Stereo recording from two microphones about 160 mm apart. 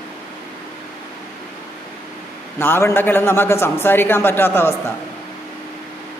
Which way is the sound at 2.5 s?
15° left (ahead or behind).